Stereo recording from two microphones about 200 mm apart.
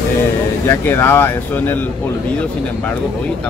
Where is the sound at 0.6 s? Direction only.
10° left (ahead or behind).